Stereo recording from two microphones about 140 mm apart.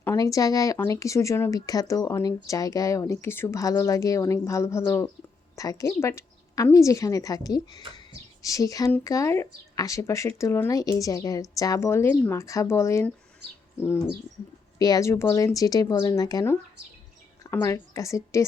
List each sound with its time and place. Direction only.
0.0 s speech: 20° left (ahead or behind)
14.8 s speech: 25° left (ahead or behind)